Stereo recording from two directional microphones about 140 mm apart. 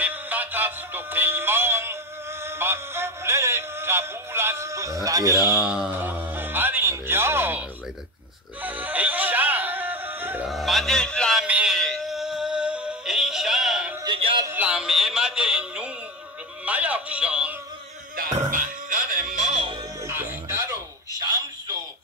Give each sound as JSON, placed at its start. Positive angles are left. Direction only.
{"t": 0.0, "sound": "music", "side_deg": -10}
{"t": 5.7, "sound": "speech", "side_deg": -10}
{"t": 8.6, "sound": "music", "side_deg": -10}
{"t": 10.5, "sound": "a sound", "side_deg": 0}
{"t": 11.4, "sound": "music", "side_deg": -5}
{"t": 14.0, "sound": "music", "side_deg": -35}
{"t": 14.4, "sound": "music", "side_deg": -15}
{"t": 18.1, "sound": "music", "side_deg": -80}
{"t": 20.0, "sound": "music", "side_deg": -15}